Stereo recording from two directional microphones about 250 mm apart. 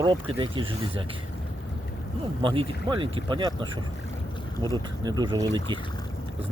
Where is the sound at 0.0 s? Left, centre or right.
Centre.